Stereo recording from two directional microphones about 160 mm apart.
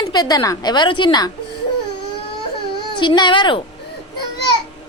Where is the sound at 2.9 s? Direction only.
30° left (ahead or behind).